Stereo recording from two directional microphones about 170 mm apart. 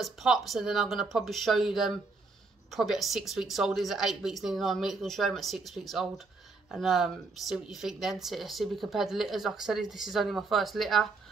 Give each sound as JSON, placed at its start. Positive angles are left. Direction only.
{"t": 0.0, "sound": "speech", "side_deg": 0}